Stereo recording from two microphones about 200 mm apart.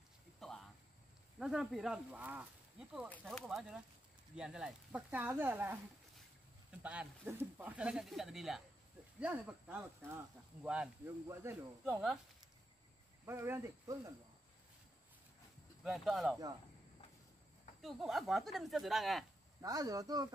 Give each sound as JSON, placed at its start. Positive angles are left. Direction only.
{"t": 0.4, "sound": "a sound", "side_deg": 0}
{"t": 1.4, "sound": "speech", "side_deg": 0}
{"t": 6.8, "sound": "speech", "side_deg": -5}
{"t": 13.2, "sound": "speech", "side_deg": -10}
{"t": 15.8, "sound": "speech", "side_deg": 0}
{"t": 17.8, "sound": "speech", "side_deg": 0}
{"t": 19.6, "sound": "speech", "side_deg": -20}